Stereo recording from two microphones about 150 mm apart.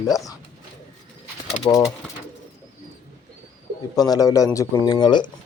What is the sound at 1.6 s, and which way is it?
Speech, 20° left (ahead or behind).